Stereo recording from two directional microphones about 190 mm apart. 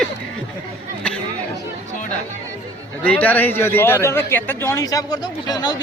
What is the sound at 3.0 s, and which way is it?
Speech, 5° left (ahead or behind).